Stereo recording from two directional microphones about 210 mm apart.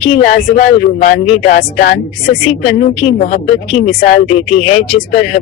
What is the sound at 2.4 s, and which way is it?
A woman's voice, 30° left (ahead or behind).